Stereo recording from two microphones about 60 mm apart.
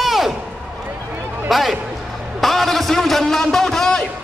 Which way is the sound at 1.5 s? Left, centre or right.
Centre.